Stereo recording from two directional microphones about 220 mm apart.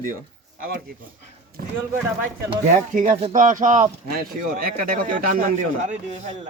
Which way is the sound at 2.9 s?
35° right (ahead or behind).